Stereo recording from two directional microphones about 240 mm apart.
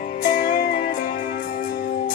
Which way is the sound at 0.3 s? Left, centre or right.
Left.